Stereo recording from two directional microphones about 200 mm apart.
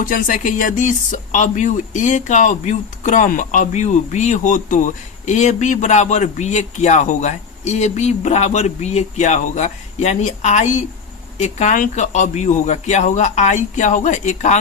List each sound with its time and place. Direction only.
0.0 s speech: 45° left (ahead or behind)